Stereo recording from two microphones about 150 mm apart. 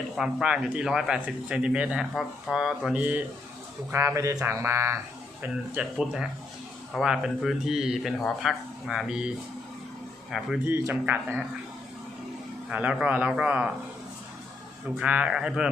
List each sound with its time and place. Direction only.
0.2 s speech: 5° right (ahead or behind)
5.4 s speech: 5° right (ahead or behind)
10.3 s speech: centre (ahead or behind)
10.7 s speech: 15° right (ahead or behind)
12.6 s speech: 10° right (ahead or behind)
14.9 s speech: 10° right (ahead or behind)